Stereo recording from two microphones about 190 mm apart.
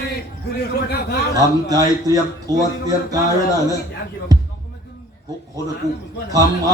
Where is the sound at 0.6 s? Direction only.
60° left (ahead or behind).